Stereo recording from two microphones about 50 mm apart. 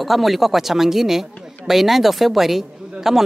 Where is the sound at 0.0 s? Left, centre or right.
Centre.